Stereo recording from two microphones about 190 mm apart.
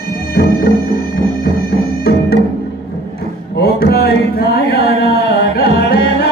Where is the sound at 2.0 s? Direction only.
55° left (ahead or behind).